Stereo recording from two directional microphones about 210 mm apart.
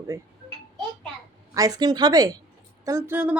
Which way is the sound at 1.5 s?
15° right (ahead or behind).